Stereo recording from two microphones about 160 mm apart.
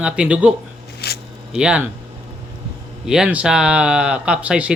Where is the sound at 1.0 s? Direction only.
85° left.